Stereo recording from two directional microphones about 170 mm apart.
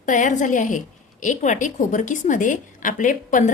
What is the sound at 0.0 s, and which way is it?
A woman's voice, 50° left (ahead or behind).